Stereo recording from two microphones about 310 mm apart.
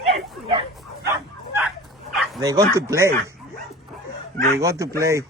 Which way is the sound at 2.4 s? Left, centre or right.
Centre.